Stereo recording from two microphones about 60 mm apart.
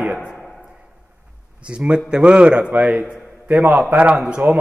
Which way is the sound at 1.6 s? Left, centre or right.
Centre.